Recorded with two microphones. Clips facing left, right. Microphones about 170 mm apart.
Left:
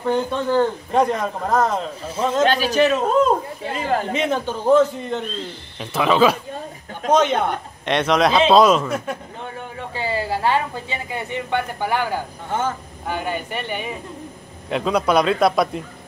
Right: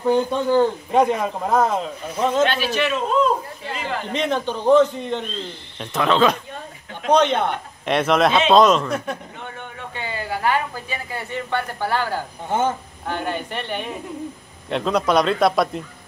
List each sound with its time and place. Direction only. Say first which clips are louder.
0.0 s speech: right 2 dB; 10° right (ahead or behind)
2.4 s a man's voice: left 4 dB; 40° left (ahead or behind)
4.1 s a man's voice: left 1 dB; 10° left (ahead or behind)
9.4 s speech: left 3 dB; 30° left (ahead or behind); by 12.2 s 15° left (ahead or behind)
12.4 s speech: right 3 dB; 20° right (ahead or behind)
13.0 s a man's voice: left 1 dB; 10° left (ahead or behind)